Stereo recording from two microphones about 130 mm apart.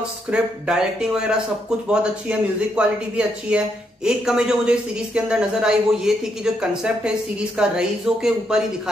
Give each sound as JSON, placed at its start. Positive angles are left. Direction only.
{"t": 0.3, "sound": "a man's voice", "side_deg": -5}